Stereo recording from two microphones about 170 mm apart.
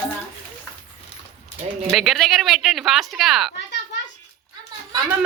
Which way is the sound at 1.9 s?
Centre (ahead or behind).